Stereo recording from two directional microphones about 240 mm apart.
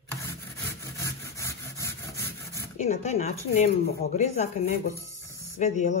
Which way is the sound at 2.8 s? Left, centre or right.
Left.